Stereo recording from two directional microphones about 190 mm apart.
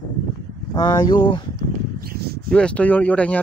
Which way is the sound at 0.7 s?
20° left (ahead or behind).